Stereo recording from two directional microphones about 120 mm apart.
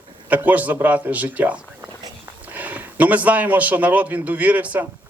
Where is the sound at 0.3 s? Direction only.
15° right (ahead or behind).